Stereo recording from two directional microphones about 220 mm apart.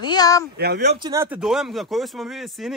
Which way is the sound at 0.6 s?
50° right (ahead or behind).